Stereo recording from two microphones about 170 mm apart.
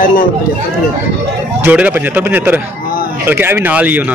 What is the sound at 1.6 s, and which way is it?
A man's voice, 10° right (ahead or behind).